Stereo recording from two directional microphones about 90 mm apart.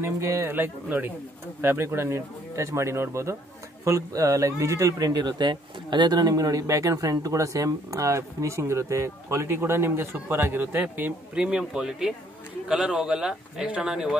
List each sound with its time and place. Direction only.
0.0 s a man's voice: 30° right (ahead or behind); by 14.1 s 5° right (ahead or behind)